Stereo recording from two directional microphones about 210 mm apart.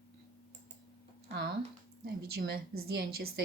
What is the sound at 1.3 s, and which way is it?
A woman's voice, 55° right (ahead or behind).